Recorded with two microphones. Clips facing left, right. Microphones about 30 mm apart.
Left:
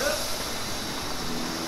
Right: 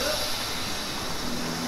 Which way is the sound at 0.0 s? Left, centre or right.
Right.